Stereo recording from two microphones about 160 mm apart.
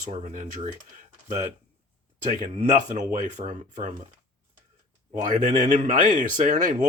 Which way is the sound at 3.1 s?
55° right (ahead or behind).